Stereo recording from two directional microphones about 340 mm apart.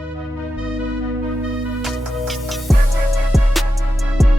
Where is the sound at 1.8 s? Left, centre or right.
Centre.